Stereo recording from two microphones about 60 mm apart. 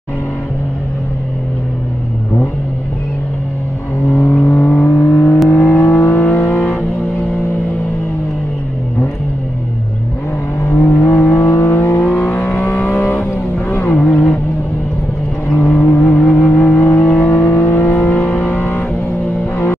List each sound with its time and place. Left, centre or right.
4.2 s vehicle: left
6.5 s vehicle: left
10.7 s vehicle: left
11.5 s vehicle: left
14.1 s music: left
15.5 s vehicle: left
15.9 s vehicle: left
16.2 s vehicle: centre
16.5 s vehicle: left
17.6 s vehicle: left
17.9 s vehicle: left
18.5 s vehicle: left